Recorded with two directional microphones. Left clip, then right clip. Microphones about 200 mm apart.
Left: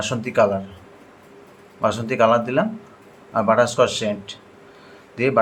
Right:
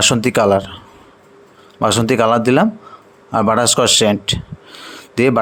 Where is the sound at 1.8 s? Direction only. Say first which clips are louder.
Right 4 dB; 55° right (ahead or behind).